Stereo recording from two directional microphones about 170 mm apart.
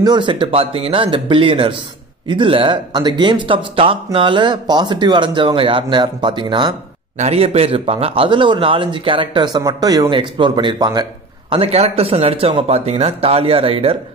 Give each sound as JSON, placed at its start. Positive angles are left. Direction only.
{"t": 0.0, "sound": "speech", "side_deg": -25}
{"t": 11.5, "sound": "speech", "side_deg": -35}